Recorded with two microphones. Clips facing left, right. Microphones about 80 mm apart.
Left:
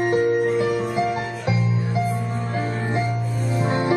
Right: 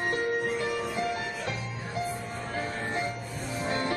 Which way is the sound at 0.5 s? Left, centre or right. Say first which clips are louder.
Left 9 dB; left.